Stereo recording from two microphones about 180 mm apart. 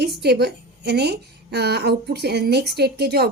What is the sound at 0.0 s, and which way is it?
A woman's voice, 65° right (ahead or behind).